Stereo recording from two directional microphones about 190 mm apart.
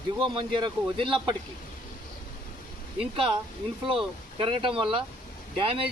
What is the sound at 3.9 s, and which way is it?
Speech, 25° right (ahead or behind).